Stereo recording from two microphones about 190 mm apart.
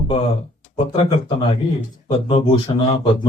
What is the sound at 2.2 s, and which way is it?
A woman's voice, 25° left (ahead or behind).